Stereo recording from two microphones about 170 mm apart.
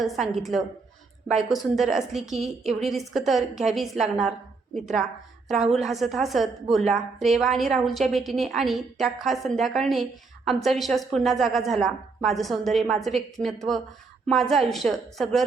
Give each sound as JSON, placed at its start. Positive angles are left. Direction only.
{"t": 0.0, "sound": "a woman's voice", "side_deg": 0}
{"t": 2.4, "sound": "a woman's voice", "side_deg": -40}
{"t": 2.9, "sound": "a woman's voice", "side_deg": 0}